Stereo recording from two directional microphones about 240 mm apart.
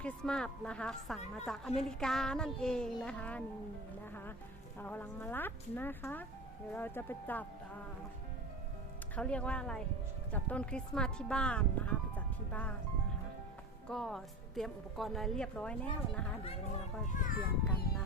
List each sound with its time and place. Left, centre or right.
0.0 s a woman's voice: centre
4.8 s speech: centre
9.1 s a woman's voice: centre
13.8 s a woman's voice: centre
17.2 s speech: left